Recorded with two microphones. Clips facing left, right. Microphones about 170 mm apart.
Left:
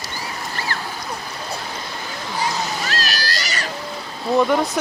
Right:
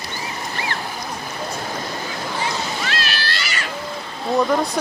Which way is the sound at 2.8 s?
40° left (ahead or behind).